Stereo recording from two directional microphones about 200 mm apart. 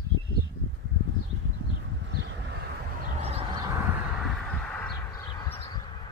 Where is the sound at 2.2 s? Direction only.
55° right (ahead or behind).